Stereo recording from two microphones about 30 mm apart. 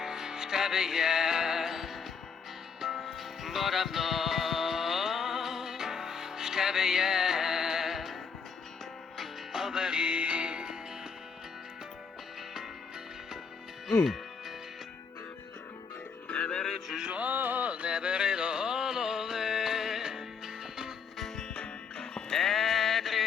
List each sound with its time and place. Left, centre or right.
0.0 s music: centre
9.5 s music: centre
10.0 s music: right
13.8 s music: centre
16.3 s music: left
17.2 s a sound: right
17.7 s a sound: right; by 20.2 s centre
21.5 s music: left
22.3 s music: centre